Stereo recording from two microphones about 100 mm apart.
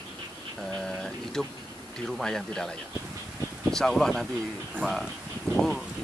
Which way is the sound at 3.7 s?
5° left (ahead or behind).